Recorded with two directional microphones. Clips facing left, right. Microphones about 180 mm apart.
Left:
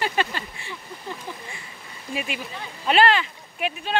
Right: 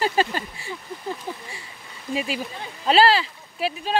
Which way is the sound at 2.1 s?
35° right (ahead or behind).